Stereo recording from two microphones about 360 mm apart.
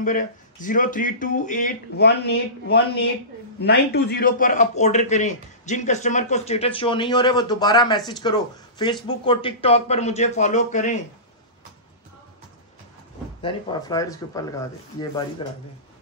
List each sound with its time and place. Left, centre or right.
0.0 s a man's voice: left
13.4 s speech: centre